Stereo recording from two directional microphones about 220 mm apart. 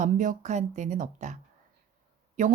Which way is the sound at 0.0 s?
35° right (ahead or behind).